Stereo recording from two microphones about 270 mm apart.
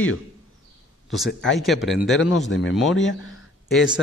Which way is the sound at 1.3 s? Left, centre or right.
Left.